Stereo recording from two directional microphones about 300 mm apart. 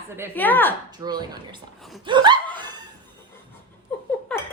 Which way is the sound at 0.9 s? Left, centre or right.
Centre.